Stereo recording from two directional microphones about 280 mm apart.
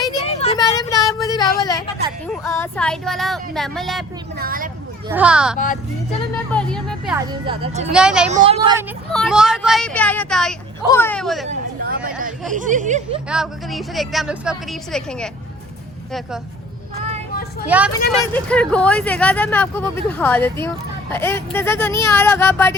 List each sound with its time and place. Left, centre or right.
0.0 s a sound: centre
2.2 s a woman's voice: centre
4.4 s speech: right
5.0 s a woman's voice: centre
5.5 s speech: left
6.5 s a woman's voice: centre
7.4 s speech: centre
7.9 s a woman's voice: centre
8.3 s speech: right
9.1 s a woman's voice: centre
11.4 s a sound: right
12.2 s speech: right
13.2 s a woman's voice: centre
17.7 s a woman's voice: centre